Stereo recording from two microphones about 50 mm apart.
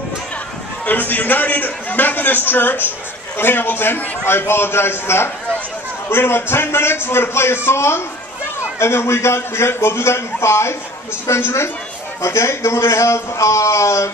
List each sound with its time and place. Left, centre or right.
0.8 s a man's voice: left
12.2 s speech: left